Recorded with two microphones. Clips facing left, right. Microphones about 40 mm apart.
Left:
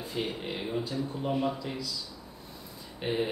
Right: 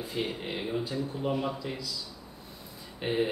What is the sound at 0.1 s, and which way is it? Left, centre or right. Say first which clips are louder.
Speech: even; centre.